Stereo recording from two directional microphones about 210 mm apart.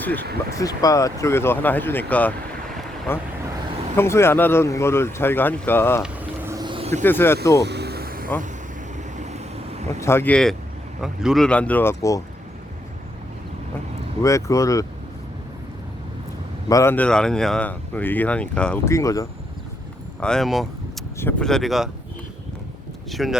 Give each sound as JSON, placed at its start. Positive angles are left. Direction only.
{"t": 0.0, "sound": "speech", "side_deg": 10}
{"t": 6.0, "sound": "vehicle", "side_deg": -10}
{"t": 7.0, "sound": "speech", "side_deg": 10}
{"t": 7.6, "sound": "vehicle", "side_deg": -50}
{"t": 9.1, "sound": "vehicle", "side_deg": -30}
{"t": 10.0, "sound": "speech", "side_deg": 10}
{"t": 14.2, "sound": "speech", "side_deg": 15}
{"t": 16.6, "sound": "speech", "side_deg": 15}
{"t": 20.1, "sound": "speech", "side_deg": 5}
{"t": 23.2, "sound": "speech", "side_deg": 0}